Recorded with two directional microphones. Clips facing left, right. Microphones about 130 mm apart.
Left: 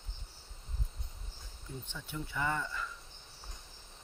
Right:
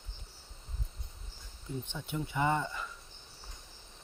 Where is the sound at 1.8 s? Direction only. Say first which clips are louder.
Right 4 dB; 20° right (ahead or behind).